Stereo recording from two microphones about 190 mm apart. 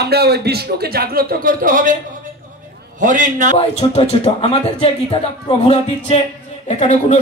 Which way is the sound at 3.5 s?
35° left (ahead or behind).